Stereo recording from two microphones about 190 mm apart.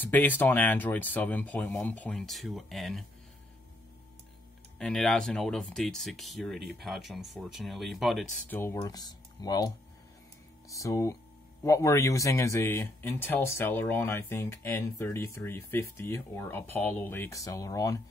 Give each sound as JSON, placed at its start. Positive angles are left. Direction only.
{"t": 0.0, "sound": "speech", "side_deg": 10}
{"t": 4.7, "sound": "speech", "side_deg": 5}
{"t": 8.5, "sound": "speech", "side_deg": 15}
{"t": 10.7, "sound": "speech", "side_deg": 15}